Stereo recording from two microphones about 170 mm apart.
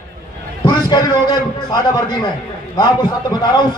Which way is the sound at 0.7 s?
25° left (ahead or behind).